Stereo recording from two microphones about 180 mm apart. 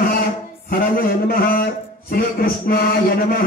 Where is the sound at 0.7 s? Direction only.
55° left (ahead or behind).